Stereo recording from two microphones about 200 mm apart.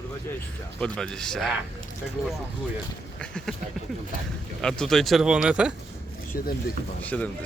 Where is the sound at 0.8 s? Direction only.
5° left (ahead or behind).